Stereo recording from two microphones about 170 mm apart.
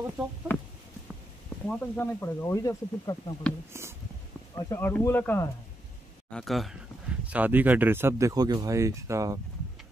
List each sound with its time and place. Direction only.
1.7 s speech: 15° left (ahead or behind)
4.6 s speech: 15° left (ahead or behind)
6.3 s speech: centre (ahead or behind); by 9.4 s 20° right (ahead or behind)